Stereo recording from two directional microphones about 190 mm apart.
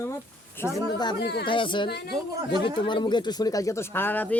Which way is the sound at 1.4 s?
25° left (ahead or behind).